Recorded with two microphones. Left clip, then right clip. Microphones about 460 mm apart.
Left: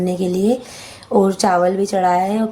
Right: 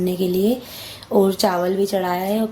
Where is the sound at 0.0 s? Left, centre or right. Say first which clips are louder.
Left 1 dB; right.